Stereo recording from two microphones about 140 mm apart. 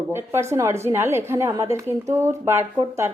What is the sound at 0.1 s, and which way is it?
A woman's voice, 20° right (ahead or behind).